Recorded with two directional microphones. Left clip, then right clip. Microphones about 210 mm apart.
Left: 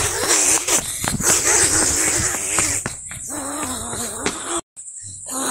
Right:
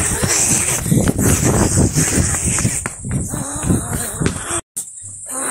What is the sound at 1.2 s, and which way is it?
Crow, centre (ahead or behind).